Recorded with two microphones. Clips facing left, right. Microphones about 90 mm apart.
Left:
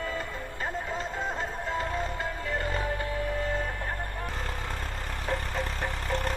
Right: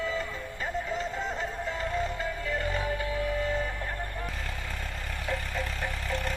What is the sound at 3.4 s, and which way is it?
Music, 50° left (ahead or behind).